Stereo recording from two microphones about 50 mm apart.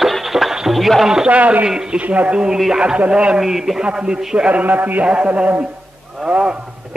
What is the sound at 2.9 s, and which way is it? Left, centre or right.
Speech, right.